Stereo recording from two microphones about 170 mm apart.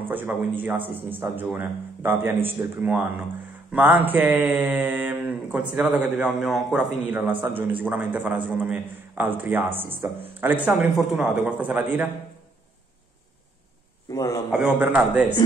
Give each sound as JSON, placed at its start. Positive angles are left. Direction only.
{"t": 0.1, "sound": "mantra", "side_deg": -10}
{"t": 14.1, "sound": "a man's voice", "side_deg": 20}
{"t": 14.5, "sound": "a man's voice", "side_deg": -5}